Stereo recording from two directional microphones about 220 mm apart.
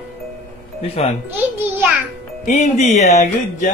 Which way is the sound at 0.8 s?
30° left (ahead or behind).